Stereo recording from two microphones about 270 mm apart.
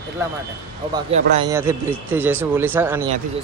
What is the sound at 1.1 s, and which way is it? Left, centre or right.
Speech, right.